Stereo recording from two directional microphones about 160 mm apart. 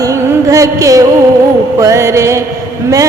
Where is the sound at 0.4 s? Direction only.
20° right (ahead or behind).